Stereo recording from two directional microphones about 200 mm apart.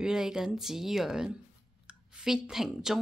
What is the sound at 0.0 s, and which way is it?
Speech, 5° right (ahead or behind).